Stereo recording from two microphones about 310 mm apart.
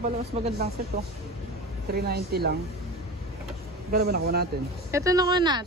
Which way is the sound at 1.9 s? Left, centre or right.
Right.